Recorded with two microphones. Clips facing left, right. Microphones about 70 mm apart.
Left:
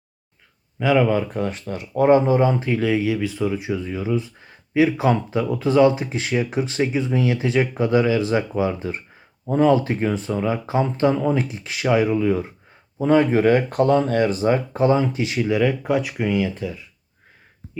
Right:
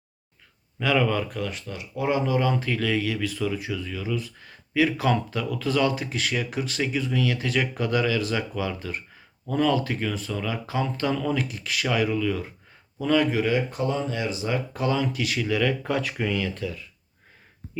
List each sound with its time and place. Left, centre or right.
0.8 s speech: centre
13.4 s speech: left; by 16.8 s centre